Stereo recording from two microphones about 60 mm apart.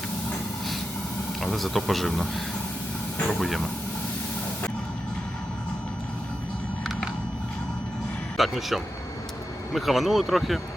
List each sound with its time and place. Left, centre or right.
1.4 s a man's voice: centre
3.2 s a sound: centre
3.4 s a man's voice: centre
8.4 s a man's voice: centre